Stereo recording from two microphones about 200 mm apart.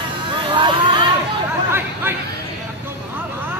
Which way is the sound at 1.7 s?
10° right (ahead or behind).